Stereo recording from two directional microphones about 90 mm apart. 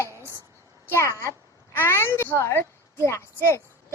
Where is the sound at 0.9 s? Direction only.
30° left (ahead or behind).